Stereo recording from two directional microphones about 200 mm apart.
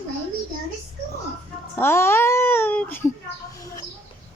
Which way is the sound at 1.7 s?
10° left (ahead or behind).